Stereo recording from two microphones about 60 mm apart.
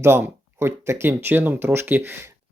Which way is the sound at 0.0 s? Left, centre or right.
Right.